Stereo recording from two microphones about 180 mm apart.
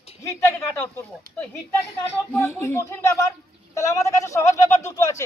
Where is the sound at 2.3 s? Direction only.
10° left (ahead or behind).